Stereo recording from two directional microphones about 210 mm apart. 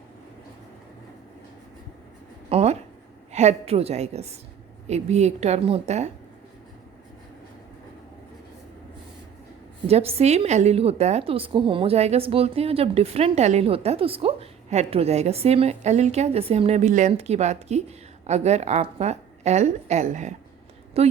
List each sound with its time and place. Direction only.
2.5 s a sound: 30° right (ahead or behind)
3.3 s a woman's voice: 30° right (ahead or behind)
9.8 s a woman's voice: 30° right (ahead or behind)